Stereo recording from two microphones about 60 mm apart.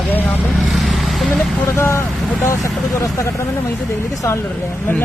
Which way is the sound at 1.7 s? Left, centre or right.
Left.